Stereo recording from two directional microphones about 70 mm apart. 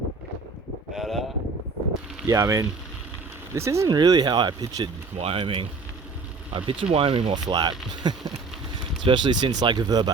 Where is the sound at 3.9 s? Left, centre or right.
Right.